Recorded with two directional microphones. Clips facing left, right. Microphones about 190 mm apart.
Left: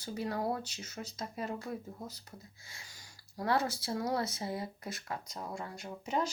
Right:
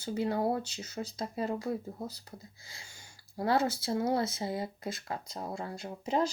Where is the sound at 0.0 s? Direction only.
25° right (ahead or behind).